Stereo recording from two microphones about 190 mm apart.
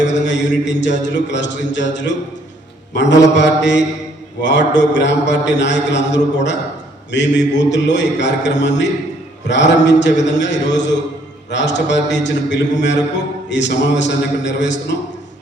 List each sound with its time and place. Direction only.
0.0 s a man's voice: 70° left (ahead or behind)